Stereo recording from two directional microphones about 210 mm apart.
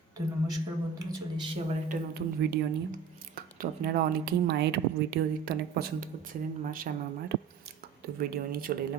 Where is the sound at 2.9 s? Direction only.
40° right (ahead or behind).